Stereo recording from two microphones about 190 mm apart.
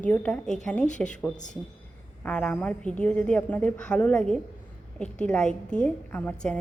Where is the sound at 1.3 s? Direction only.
40° left (ahead or behind).